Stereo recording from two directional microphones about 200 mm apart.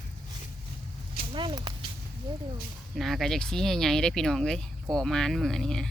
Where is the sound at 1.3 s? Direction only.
25° right (ahead or behind).